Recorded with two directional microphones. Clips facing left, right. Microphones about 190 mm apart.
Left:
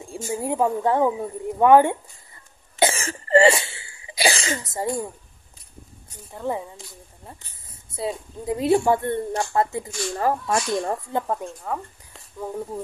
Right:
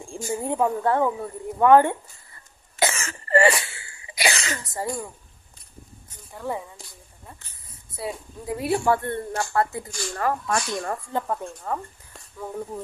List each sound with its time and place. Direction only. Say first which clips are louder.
0.0 s a sound: left 1 dB; 5° left (ahead or behind)
0.3 s speech: left 1 dB; 10° left (ahead or behind)
2.8 s cough: left 4 dB; 35° left (ahead or behind)
6.3 s speech: left 3 dB; 20° left (ahead or behind)
7.9 s speech: left 4 dB; 20° left (ahead or behind)
9.8 s speech: left 4 dB; centre (ahead or behind)
10.1 s speech: left 2 dB; 30° left (ahead or behind)
11.5 s speech: even; centre (ahead or behind)